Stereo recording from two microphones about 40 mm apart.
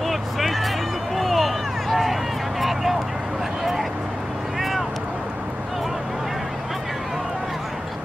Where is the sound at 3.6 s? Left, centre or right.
Centre.